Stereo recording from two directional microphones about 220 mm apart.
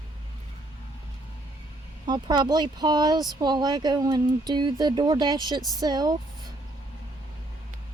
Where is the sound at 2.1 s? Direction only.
20° right (ahead or behind).